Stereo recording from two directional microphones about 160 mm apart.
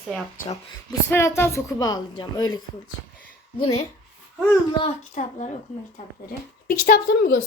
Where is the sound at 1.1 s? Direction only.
15° left (ahead or behind).